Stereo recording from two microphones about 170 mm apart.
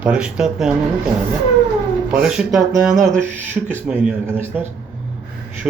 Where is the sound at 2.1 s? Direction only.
5° right (ahead or behind).